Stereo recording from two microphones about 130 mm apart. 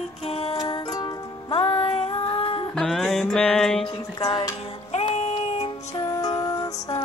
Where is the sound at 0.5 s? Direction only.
35° left (ahead or behind).